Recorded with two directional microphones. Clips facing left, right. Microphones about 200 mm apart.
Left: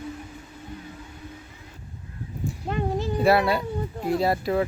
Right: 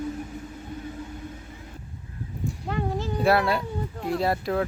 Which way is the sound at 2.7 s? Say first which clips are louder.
Left 2 dB; 20° left (ahead or behind).